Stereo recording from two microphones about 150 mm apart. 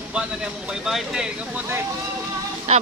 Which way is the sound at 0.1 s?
5° right (ahead or behind).